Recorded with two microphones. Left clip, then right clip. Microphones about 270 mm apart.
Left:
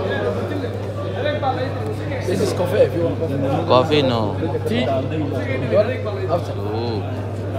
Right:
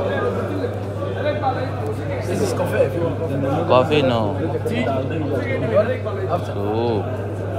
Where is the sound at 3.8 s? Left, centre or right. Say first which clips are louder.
Even; left.